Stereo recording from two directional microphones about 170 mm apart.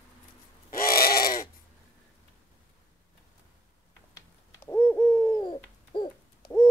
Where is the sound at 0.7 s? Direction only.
60° left (ahead or behind).